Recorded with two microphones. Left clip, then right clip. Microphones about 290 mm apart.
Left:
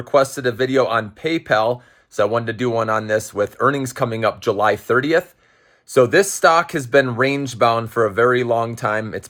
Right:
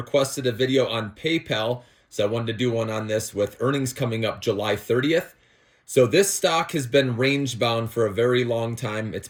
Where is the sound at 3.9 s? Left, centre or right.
Centre.